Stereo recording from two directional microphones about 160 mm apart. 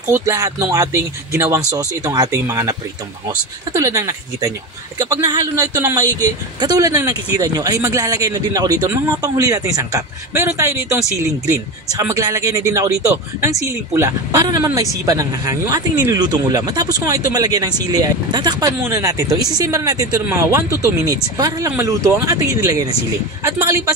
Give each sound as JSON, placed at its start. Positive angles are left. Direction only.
{"t": 0.1, "sound": "speech", "side_deg": -20}